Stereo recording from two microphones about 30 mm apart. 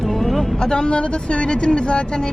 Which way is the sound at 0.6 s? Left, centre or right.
Left.